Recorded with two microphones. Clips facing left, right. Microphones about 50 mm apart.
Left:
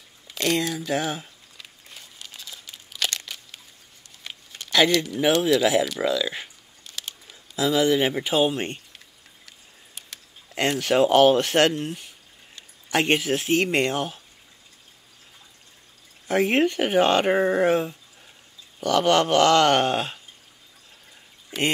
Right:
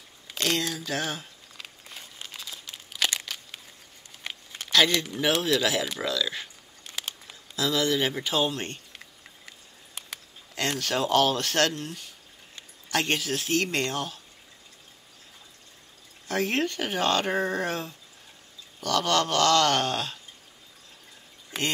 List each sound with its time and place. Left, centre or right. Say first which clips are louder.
0.4 s speech: left 4 dB; centre
2.3 s crumpling: right 1 dB; centre
2.7 s a sound: even; centre
4.5 s a sound: right 1 dB; centre
4.9 s speech: left 5 dB; centre
5.4 s speech: left 6 dB; centre
7.5 s speech: left 5 dB; centre
10.5 s speech: left 6 dB; left
16.3 s speech: left 6 dB; left